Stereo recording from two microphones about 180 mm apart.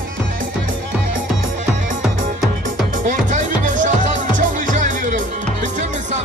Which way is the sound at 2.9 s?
45° right (ahead or behind).